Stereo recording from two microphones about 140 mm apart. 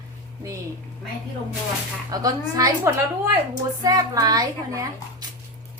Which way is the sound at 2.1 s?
25° right (ahead or behind).